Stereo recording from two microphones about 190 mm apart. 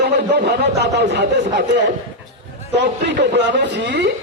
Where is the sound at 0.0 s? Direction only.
60° right (ahead or behind).